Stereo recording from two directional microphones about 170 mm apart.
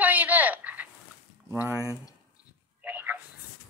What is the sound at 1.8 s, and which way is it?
Speech, 15° left (ahead or behind).